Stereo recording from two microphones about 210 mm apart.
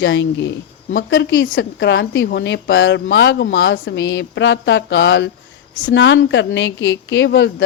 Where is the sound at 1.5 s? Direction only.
60° left (ahead or behind).